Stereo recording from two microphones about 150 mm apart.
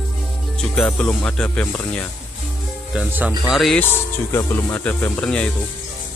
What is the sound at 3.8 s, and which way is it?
Speech, 15° left (ahead or behind).